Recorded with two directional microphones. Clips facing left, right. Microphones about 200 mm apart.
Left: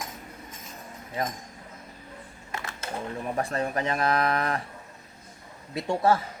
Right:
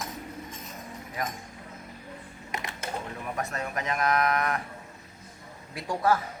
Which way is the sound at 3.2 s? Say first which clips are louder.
Left 7 dB; 30° left (ahead or behind).